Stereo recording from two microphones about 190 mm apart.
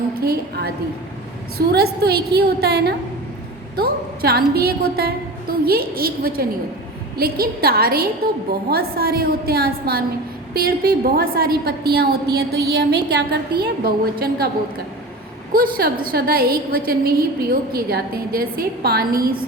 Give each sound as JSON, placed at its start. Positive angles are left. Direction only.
{"t": 0.1, "sound": "a woman's voice", "side_deg": -55}
{"t": 15.5, "sound": "a woman's voice", "side_deg": -50}